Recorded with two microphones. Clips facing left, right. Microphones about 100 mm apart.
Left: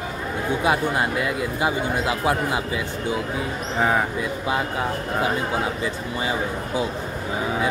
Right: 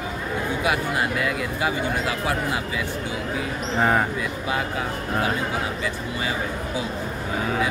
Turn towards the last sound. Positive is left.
turn(degrees=25)  # may be behind; listen again after turning